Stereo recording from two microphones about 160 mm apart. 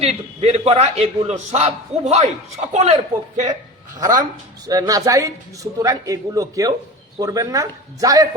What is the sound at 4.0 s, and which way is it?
A man's voice, 25° right (ahead or behind).